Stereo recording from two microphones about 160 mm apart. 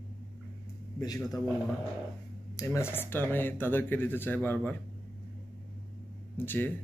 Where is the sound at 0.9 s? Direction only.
25° left (ahead or behind).